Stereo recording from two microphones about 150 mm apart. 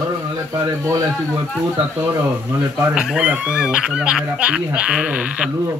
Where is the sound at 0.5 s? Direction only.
25° right (ahead or behind).